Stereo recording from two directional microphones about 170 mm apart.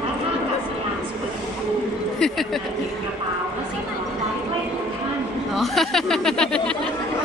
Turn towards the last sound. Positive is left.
turn(degrees=5)  # may be behind; listen again after turning